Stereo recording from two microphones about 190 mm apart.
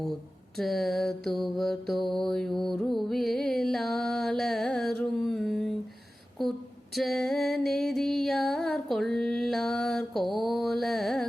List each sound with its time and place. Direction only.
0.5 s mantra: centre (ahead or behind)
6.9 s mantra: centre (ahead or behind)